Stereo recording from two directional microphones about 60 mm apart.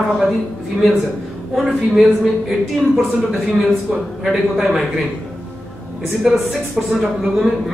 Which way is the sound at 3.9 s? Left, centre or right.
Centre.